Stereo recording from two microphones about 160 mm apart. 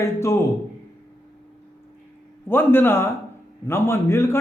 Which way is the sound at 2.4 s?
15° left (ahead or behind).